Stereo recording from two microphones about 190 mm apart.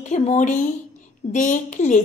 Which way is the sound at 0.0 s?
40° left (ahead or behind).